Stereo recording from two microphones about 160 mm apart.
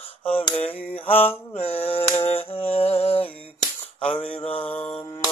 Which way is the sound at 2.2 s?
35° left (ahead or behind).